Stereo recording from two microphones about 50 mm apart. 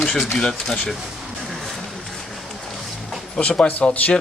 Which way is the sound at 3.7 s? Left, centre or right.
Left.